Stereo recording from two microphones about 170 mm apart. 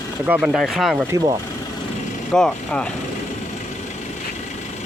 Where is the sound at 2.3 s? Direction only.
5° left (ahead or behind).